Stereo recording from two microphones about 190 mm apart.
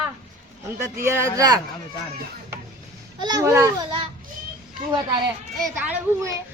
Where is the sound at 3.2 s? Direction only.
20° right (ahead or behind).